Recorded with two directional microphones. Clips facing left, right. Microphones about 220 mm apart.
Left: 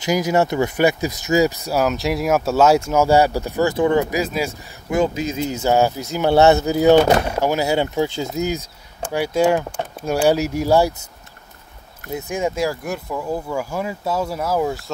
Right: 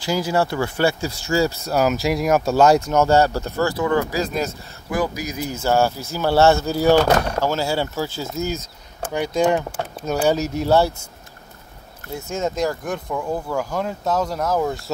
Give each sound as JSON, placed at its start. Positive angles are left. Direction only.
{"t": 0.0, "sound": "speech", "side_deg": 20}
{"t": 1.7, "sound": "speech", "side_deg": 0}
{"t": 4.9, "sound": "speech", "side_deg": 25}
{"t": 12.1, "sound": "speech", "side_deg": 15}